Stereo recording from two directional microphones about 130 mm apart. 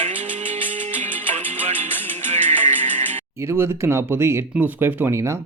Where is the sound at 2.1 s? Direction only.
65° right (ahead or behind).